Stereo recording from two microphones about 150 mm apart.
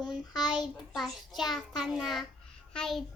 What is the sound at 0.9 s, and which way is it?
A child's voice, centre (ahead or behind).